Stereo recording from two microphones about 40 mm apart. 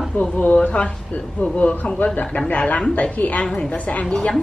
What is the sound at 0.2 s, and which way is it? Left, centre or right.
Speech, left.